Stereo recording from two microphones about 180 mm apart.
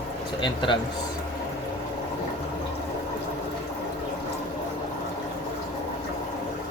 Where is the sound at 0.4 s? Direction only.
25° left (ahead or behind).